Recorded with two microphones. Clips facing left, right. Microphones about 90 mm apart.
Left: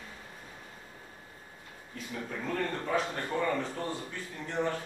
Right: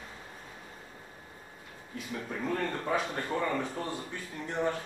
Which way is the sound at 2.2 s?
10° right (ahead or behind).